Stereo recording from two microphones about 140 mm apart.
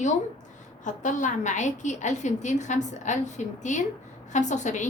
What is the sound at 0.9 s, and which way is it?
A woman's voice, 65° left (ahead or behind).